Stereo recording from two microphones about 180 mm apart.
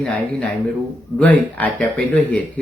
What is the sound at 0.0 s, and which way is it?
Speech, 5° left (ahead or behind).